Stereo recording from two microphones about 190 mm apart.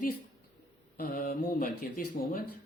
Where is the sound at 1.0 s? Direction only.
50° left (ahead or behind).